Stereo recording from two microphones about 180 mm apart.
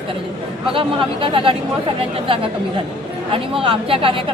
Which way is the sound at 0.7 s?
30° right (ahead or behind).